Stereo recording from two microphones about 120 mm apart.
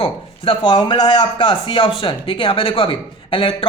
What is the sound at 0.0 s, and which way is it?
A man's voice, 45° left (ahead or behind).